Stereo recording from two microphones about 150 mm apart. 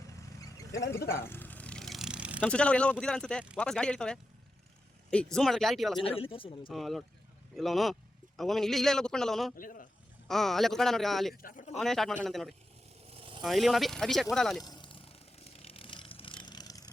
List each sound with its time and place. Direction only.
0.1 s vehicle: 20° left (ahead or behind); by 2.4 s 5° right (ahead or behind)
2.4 s a man's voice: 5° left (ahead or behind)
6.0 s speech: 40° left (ahead or behind)
6.7 s a man's voice: centre (ahead or behind)
9.6 s speech: 70° left (ahead or behind)
10.2 s a man's voice: centre (ahead or behind)
11.4 s speech: 55° left (ahead or behind)
11.8 s a man's voice: centre (ahead or behind)
14.6 s a sound: 30° left (ahead or behind)